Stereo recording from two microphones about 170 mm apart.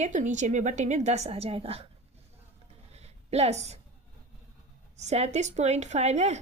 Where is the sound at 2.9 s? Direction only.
40° right (ahead or behind).